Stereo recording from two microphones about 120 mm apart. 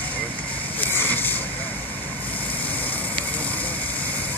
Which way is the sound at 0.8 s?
15° left (ahead or behind).